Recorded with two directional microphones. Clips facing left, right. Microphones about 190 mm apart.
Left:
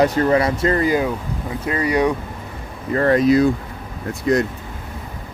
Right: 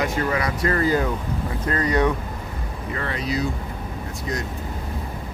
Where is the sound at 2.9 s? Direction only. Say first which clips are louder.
Left 13 dB; 45° left (ahead or behind).